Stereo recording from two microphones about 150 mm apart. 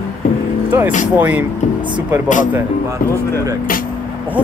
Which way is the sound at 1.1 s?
10° right (ahead or behind).